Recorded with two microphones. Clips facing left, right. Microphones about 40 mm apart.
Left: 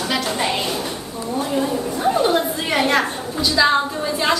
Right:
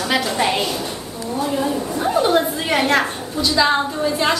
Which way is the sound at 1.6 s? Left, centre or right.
Centre.